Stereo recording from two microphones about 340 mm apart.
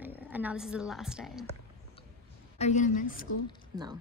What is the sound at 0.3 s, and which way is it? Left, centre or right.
A woman's voice, centre.